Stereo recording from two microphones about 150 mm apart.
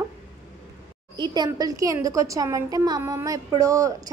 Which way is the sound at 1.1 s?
30° right (ahead or behind).